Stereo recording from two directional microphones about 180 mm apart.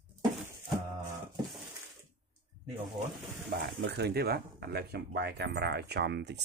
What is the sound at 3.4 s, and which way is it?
Speech, 65° right (ahead or behind).